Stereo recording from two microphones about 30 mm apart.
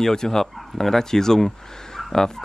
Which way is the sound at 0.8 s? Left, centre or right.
Centre.